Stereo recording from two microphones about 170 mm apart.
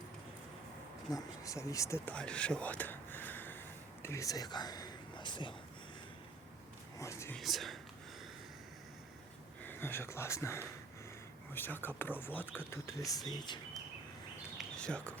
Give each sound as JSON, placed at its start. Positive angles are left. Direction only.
{"t": 1.1, "sound": "speech", "side_deg": 20}
{"t": 7.0, "sound": "speech", "side_deg": 15}
{"t": 7.3, "sound": "speech", "side_deg": 0}
{"t": 9.6, "sound": "speech", "side_deg": 15}
{"t": 14.6, "sound": "a sound", "side_deg": 5}